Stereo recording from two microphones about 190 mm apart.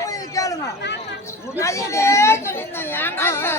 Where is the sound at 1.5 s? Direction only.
15° left (ahead or behind).